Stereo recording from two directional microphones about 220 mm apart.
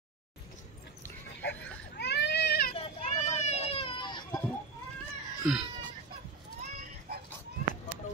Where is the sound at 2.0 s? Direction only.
50° left (ahead or behind).